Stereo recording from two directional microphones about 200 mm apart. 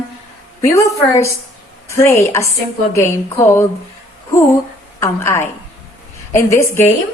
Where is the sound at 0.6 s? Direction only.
15° left (ahead or behind).